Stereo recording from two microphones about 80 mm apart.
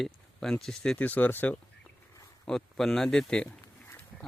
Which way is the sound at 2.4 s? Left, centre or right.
Centre.